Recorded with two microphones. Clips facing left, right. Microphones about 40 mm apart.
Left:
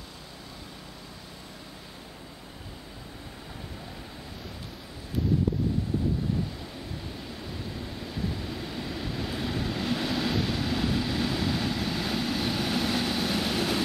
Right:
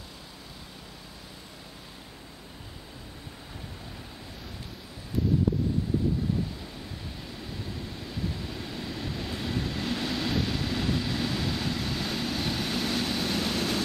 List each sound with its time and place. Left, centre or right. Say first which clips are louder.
7.2 s vehicle: left 1 dB; centre